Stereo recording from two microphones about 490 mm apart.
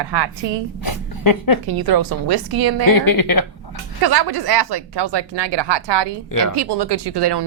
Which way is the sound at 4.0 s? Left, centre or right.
Right.